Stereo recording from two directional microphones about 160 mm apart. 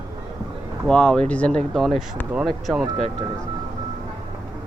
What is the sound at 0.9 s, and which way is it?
Speech, 5° left (ahead or behind).